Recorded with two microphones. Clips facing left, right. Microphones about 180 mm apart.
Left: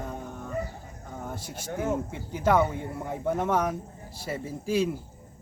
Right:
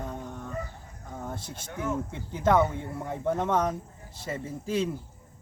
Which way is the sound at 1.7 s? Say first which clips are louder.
Left 3 dB; 35° left (ahead or behind).